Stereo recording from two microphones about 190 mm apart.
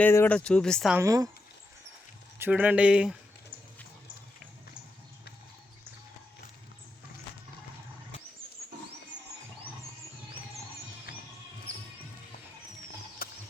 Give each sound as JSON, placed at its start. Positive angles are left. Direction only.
{"t": 0.0, "sound": "speech", "side_deg": 10}
{"t": 0.9, "sound": "speech", "side_deg": -15}
{"t": 2.4, "sound": "speech", "side_deg": -10}
{"t": 13.2, "sound": "a sound", "side_deg": 50}